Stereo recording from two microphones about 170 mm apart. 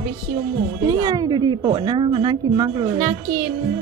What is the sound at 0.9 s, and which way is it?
A woman's voice, 20° right (ahead or behind).